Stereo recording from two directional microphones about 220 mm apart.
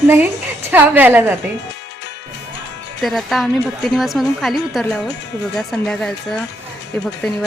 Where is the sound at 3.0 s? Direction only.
Centre (ahead or behind).